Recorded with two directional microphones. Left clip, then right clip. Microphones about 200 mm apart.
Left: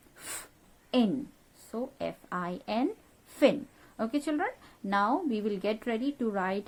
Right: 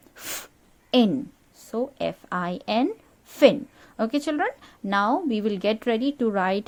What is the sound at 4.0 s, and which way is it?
Speech, 35° right (ahead or behind).